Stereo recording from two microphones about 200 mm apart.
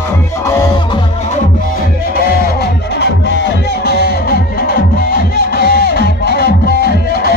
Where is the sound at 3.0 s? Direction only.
60° left (ahead or behind).